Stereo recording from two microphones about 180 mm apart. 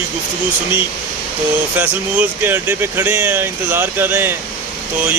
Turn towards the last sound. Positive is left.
turn(degrees=-10)  # may be behind; listen again after turning